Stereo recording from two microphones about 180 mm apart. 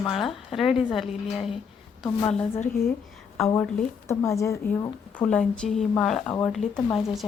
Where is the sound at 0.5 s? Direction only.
Centre (ahead or behind).